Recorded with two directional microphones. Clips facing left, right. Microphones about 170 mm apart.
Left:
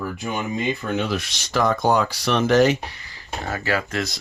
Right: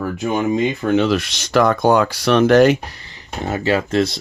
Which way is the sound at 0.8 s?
80° right.